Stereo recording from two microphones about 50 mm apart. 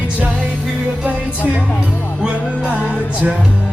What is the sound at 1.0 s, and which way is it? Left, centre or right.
Music, right.